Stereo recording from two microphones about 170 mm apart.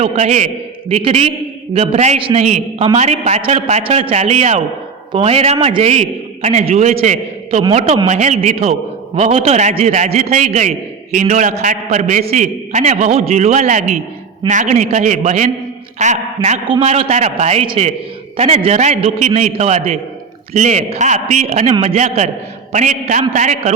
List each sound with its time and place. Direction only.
0.0 s a man's voice: 40° right (ahead or behind)
10.3 s a man's voice: 50° right (ahead or behind)